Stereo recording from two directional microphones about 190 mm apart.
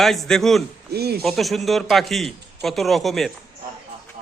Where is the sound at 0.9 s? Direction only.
55° right (ahead or behind).